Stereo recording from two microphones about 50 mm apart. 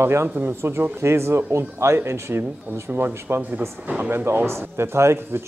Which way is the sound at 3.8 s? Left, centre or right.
Right.